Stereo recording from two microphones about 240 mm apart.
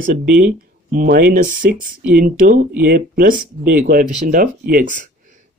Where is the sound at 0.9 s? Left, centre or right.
Right.